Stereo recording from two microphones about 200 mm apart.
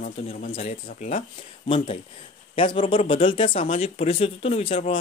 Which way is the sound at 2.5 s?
25° left (ahead or behind).